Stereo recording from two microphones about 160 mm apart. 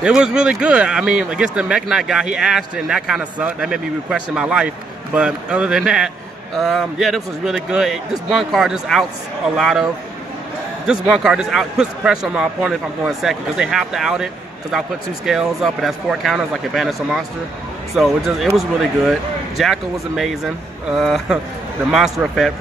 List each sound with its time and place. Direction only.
0.0 s speech: 5° right (ahead or behind)
10.9 s speech: 5° right (ahead or behind)